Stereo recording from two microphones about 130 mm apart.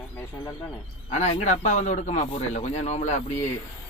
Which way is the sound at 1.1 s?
60° left (ahead or behind).